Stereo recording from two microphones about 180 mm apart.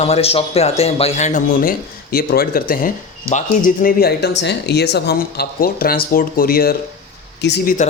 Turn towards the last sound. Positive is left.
turn(degrees=70)  # may be behind; listen again after turning